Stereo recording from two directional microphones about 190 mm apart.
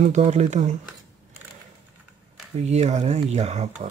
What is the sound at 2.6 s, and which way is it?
Speech, 35° right (ahead or behind).